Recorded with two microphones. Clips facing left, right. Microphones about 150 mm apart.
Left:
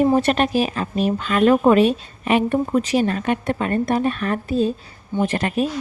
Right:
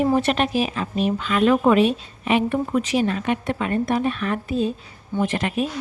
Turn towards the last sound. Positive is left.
turn(degrees=40)  # may be behind; listen again after turning